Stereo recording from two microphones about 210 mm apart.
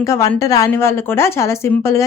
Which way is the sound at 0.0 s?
15° left (ahead or behind).